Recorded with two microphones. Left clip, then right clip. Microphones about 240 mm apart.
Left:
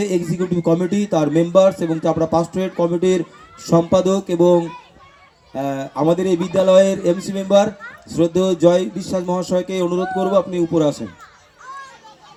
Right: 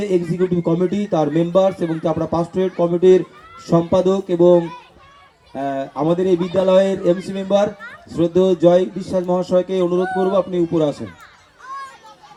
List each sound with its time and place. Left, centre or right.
0.0 s speech: left
11.7 s children playing: right